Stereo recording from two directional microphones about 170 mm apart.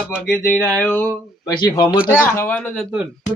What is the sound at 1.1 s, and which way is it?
Speech, 20° left (ahead or behind).